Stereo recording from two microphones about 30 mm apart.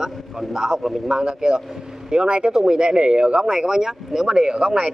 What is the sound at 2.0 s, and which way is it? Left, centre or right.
Speech, right.